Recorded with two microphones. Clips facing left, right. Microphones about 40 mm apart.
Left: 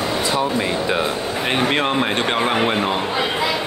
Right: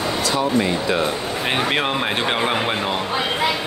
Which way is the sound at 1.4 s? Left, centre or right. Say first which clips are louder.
Left 2 dB; centre.